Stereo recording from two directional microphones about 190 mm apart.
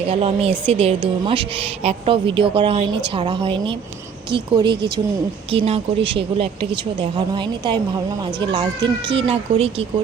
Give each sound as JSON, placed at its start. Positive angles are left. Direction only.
{"t": 0.0, "sound": "a woman's voice", "side_deg": -30}